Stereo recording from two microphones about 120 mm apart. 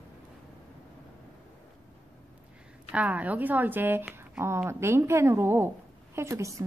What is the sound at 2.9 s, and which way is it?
A woman's voice, 10° right (ahead or behind).